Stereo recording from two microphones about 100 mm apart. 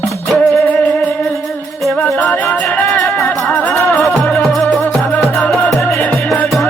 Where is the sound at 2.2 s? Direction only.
15° left (ahead or behind).